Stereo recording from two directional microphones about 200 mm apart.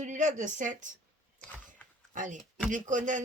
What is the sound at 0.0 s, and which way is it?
Speech, 40° right (ahead or behind).